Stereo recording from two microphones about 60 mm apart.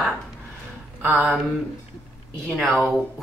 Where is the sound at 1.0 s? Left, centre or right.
Right.